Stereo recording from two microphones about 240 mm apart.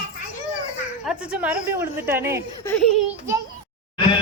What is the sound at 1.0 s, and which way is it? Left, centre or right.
A woman's voice, centre.